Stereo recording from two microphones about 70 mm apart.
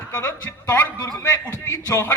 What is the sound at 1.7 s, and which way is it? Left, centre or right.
Speech, left.